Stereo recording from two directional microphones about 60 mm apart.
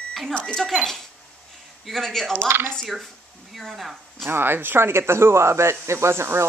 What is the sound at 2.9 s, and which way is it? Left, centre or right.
Speech, centre.